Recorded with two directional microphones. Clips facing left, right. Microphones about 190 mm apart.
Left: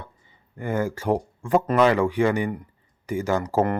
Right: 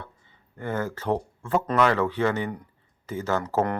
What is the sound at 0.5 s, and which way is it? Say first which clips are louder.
Speech: left 4 dB; 10° left (ahead or behind).